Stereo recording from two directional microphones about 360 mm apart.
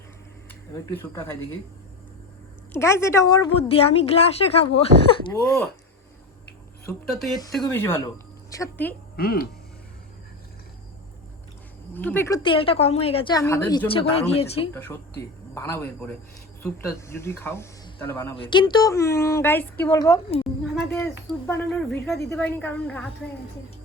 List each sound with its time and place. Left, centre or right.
1.1 s speech: centre
2.7 s speech: centre
5.3 s a woman's voice: centre
7.1 s a woman's voice: centre
9.1 s speech: left
11.9 s speech: centre
20.7 s a sound: centre
21.9 s a woman's voice: centre